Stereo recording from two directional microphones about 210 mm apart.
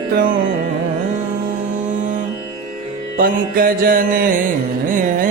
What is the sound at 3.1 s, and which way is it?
Music, 45° right (ahead or behind).